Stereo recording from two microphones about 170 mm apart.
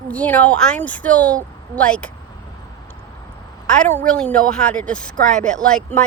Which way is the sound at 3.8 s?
10° left (ahead or behind).